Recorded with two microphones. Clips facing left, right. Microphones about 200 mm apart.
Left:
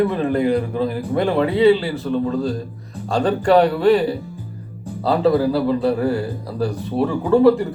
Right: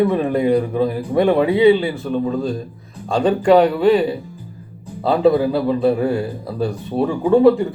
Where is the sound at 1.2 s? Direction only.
15° right (ahead or behind).